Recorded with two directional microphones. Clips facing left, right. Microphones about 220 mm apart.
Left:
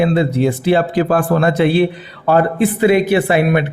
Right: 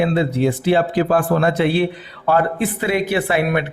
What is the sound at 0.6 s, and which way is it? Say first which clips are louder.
Speech: left 2 dB; 60° left (ahead or behind).